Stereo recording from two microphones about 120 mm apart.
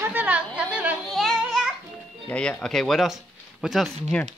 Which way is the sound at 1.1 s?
Centre (ahead or behind).